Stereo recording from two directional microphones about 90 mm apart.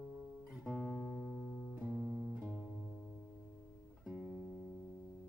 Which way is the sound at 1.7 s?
15° right (ahead or behind).